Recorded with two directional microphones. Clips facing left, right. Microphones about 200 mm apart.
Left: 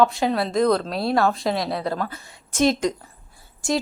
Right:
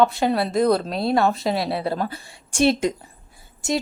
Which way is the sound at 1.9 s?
30° right (ahead or behind).